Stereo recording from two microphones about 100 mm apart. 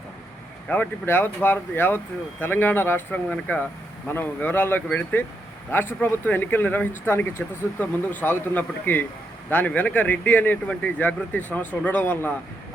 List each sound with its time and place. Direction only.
0.7 s speech: 20° left (ahead or behind)
3.2 s speech: 10° left (ahead or behind)